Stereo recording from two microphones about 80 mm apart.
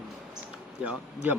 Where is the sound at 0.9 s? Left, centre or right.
Centre.